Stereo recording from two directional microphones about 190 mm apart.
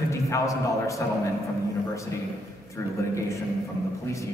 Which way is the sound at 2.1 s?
15° left (ahead or behind).